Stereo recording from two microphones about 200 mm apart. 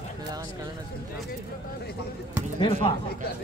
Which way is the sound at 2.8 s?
25° left (ahead or behind).